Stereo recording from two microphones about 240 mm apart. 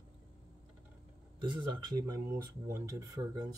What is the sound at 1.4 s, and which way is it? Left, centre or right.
Speech, centre.